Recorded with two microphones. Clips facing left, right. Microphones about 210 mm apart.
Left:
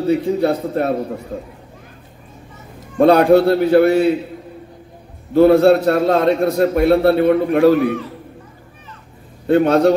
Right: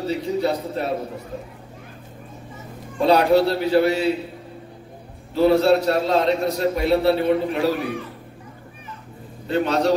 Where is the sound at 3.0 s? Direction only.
50° left (ahead or behind).